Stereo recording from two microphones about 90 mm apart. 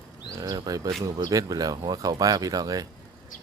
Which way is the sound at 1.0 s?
40° right (ahead or behind).